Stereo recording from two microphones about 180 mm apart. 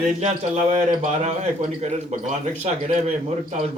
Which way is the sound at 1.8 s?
35° right (ahead or behind).